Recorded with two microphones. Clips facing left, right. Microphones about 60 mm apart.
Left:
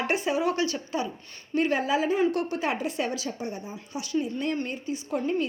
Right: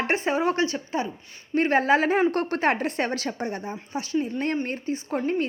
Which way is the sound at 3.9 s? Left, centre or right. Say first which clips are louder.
Right 2 dB; right.